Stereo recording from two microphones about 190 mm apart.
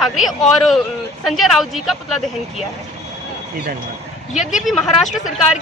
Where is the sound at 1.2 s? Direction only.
Centre (ahead or behind).